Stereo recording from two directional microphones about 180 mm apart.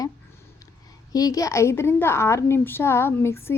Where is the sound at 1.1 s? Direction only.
20° left (ahead or behind).